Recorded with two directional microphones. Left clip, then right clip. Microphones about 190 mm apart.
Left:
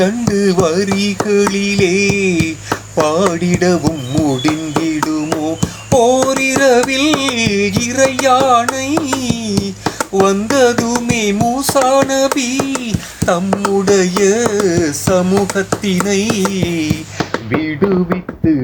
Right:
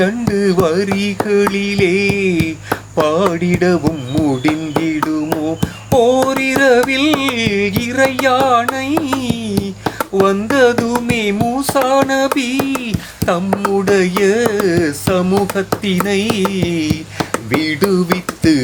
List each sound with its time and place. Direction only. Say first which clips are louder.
0.0 s carnatic music: left 1 dB; 5° right (ahead or behind)
17.5 s music: right 1 dB; 20° right (ahead or behind)